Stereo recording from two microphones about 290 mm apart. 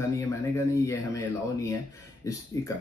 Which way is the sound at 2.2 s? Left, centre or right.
Centre.